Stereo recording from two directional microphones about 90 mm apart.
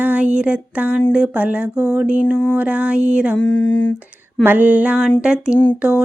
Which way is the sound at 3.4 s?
10° left (ahead or behind).